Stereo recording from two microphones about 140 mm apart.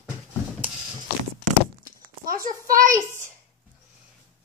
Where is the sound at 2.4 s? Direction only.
75° right (ahead or behind).